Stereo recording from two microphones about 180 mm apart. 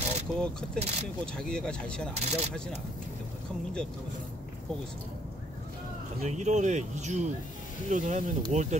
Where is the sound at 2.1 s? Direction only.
35° right (ahead or behind).